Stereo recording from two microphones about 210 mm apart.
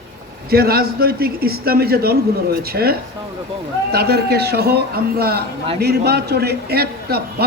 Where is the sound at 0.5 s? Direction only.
45° right (ahead or behind).